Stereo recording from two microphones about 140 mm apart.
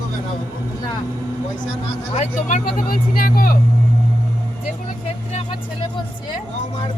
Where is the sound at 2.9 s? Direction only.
90° left.